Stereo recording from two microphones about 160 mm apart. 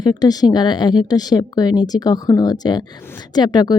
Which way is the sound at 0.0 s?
25° left (ahead or behind).